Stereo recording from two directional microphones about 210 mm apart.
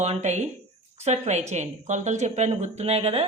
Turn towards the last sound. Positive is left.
turn(degrees=-30)  # may be behind; listen again after turning